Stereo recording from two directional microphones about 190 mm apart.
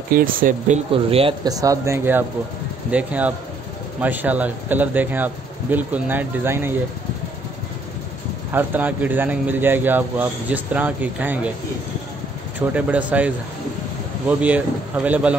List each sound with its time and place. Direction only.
0.1 s speech: 45° right (ahead or behind)
0.9 s speech: 30° right (ahead or behind); by 6.8 s 10° right (ahead or behind)
8.5 s speech: 10° right (ahead or behind)
12.5 s speech: 10° right (ahead or behind)
14.4 s a man's voice: 5° right (ahead or behind)